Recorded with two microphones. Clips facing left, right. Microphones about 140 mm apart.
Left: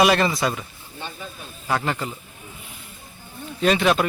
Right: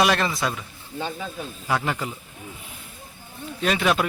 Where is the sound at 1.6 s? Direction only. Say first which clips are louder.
Left 1 dB; 5° right (ahead or behind).